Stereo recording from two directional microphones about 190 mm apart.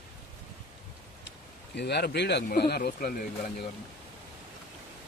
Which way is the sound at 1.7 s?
60° left (ahead or behind).